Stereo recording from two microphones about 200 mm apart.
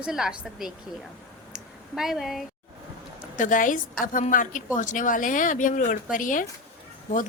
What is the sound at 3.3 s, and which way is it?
Speech, 40° left (ahead or behind).